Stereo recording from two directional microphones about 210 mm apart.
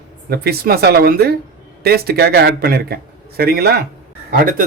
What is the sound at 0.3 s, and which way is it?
A man's voice, 45° right (ahead or behind).